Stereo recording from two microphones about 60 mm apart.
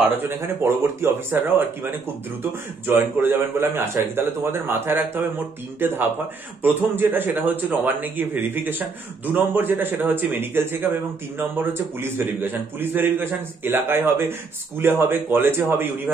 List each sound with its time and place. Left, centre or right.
1.0 s speech: right